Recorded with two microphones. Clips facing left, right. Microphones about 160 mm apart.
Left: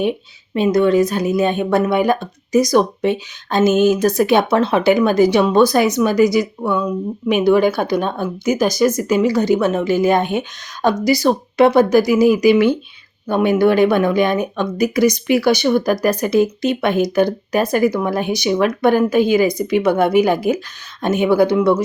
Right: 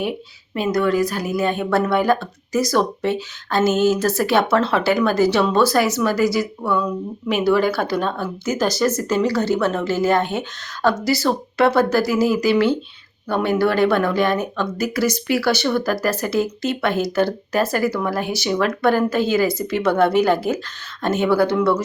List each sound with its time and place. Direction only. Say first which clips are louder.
0.5 s a woman's voice: left 5 dB; 25° left (ahead or behind)